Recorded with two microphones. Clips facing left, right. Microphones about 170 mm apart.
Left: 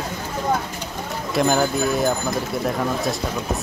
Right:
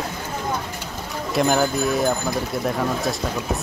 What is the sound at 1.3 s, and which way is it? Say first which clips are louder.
Speech: even; centre (ahead or behind).